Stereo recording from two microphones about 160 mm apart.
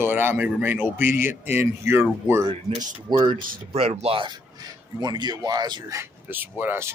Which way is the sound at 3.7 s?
40° right (ahead or behind).